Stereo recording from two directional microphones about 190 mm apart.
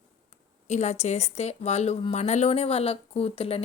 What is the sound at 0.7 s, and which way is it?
Speech, 35° left (ahead or behind).